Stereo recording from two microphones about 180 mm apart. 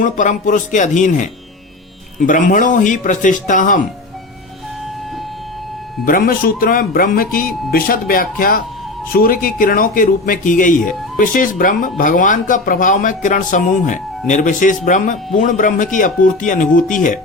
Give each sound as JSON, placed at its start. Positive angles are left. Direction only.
{"t": 0.0, "sound": "speech", "side_deg": 45}
{"t": 6.1, "sound": "speech", "side_deg": 55}